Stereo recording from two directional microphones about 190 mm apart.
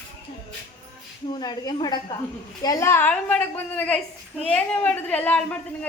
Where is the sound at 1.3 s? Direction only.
20° left (ahead or behind).